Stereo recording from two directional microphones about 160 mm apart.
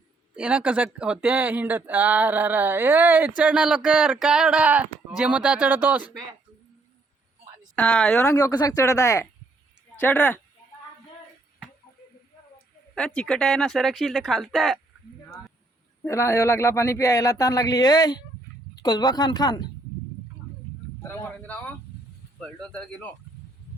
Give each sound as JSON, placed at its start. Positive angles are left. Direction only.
{"t": 0.3, "sound": "speech", "side_deg": -10}
{"t": 7.8, "sound": "speech", "side_deg": 5}
{"t": 8.2, "sound": "speech", "side_deg": 20}
{"t": 12.9, "sound": "speech", "side_deg": 5}
{"t": 16.0, "sound": "speech", "side_deg": 15}
{"t": 22.4, "sound": "speech", "side_deg": 5}